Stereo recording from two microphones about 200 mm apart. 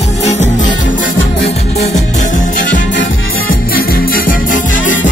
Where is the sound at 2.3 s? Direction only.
40° left (ahead or behind).